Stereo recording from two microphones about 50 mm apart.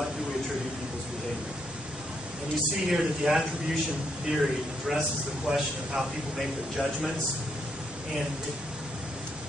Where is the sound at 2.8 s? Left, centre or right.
Centre.